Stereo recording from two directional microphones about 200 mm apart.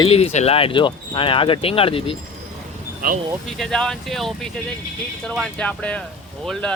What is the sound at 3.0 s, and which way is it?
Speech, 45° right (ahead or behind).